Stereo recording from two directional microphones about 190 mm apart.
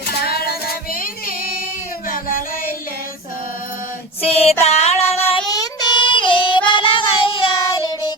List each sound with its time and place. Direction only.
0.1 s female singing: 55° left (ahead or behind)
4.2 s female singing: 30° left (ahead or behind)
4.6 s child singing: 35° left (ahead or behind)
5.5 s child singing: 20° left (ahead or behind)